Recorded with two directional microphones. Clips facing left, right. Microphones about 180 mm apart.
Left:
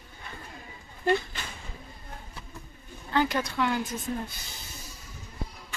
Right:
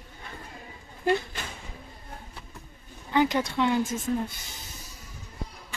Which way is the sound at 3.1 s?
20° right (ahead or behind).